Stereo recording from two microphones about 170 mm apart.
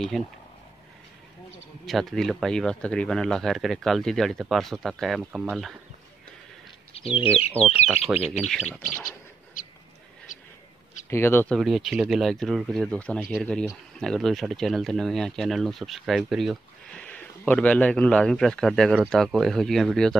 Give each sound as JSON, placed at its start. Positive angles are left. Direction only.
{"t": 0.1, "sound": "speech", "side_deg": 0}
{"t": 1.9, "sound": "speech", "side_deg": 0}
{"t": 7.1, "sound": "speech", "side_deg": 35}
{"t": 7.6, "sound": "speech", "side_deg": -10}
{"t": 8.5, "sound": "speech", "side_deg": 5}
{"t": 9.6, "sound": "a sound", "side_deg": 50}
{"t": 11.1, "sound": "speech", "side_deg": 15}
{"t": 11.5, "sound": "speech", "side_deg": 0}